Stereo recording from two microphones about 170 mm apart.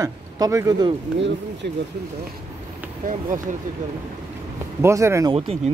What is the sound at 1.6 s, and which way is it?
Speech, 75° right (ahead or behind).